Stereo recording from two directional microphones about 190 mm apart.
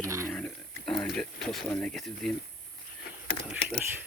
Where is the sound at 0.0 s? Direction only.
15° right (ahead or behind).